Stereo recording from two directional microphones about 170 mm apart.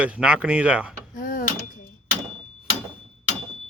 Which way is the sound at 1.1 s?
55° left (ahead or behind).